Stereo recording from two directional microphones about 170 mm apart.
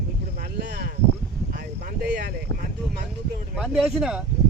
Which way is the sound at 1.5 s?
60° right (ahead or behind).